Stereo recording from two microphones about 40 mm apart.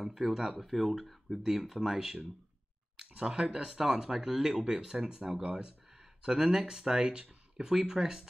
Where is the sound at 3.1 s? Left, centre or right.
Right.